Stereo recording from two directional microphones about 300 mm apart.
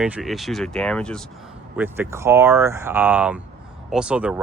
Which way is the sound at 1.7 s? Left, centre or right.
Centre.